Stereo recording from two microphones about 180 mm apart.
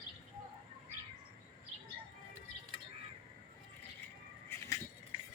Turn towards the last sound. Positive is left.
turn(degrees=15)  # may be behind; listen again after turning